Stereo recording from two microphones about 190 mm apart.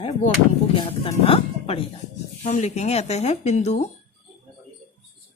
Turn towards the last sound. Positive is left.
turn(degrees=35)  # may be behind; listen again after turning